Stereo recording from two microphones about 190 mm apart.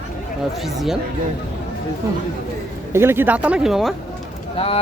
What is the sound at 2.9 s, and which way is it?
Speech, 10° right (ahead or behind).